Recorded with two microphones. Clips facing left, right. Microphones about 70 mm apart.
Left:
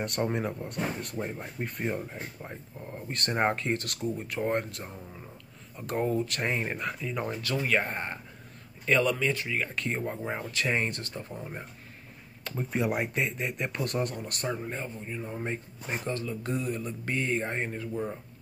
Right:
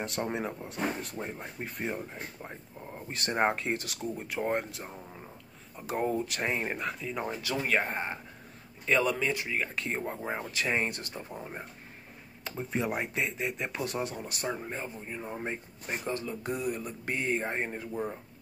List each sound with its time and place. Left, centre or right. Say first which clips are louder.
0.0 s speech: left 3 dB; centre
11.0 s speech: left 1 dB; centre
15.0 s speech: left 2 dB; centre
17.4 s speech: left 1 dB; centre
17.6 s speech: left 2 dB; centre